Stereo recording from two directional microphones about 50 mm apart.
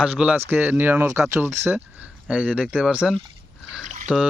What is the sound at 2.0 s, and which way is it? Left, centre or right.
Speech, right.